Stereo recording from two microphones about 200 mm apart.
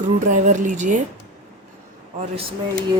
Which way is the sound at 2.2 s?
30° right (ahead or behind).